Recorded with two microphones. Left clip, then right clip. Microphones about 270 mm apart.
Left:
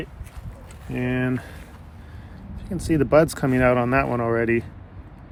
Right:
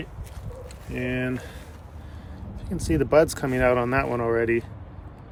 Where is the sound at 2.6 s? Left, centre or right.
Centre.